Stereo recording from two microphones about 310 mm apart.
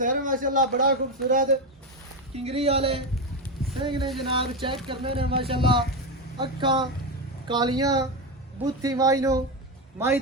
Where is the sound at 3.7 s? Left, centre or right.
Centre.